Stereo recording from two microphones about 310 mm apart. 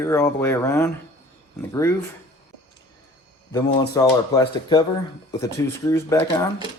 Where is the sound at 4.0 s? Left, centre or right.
Centre.